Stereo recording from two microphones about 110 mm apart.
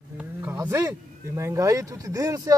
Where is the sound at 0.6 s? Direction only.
25° right (ahead or behind).